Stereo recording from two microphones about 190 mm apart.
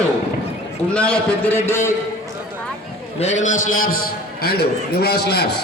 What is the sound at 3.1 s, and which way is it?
A man's voice, 35° left (ahead or behind).